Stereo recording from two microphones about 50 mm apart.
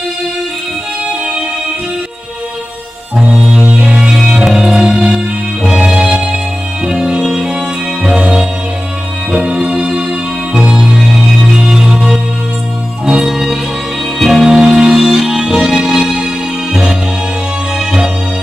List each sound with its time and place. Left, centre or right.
3.2 s music: centre
17.7 s music: centre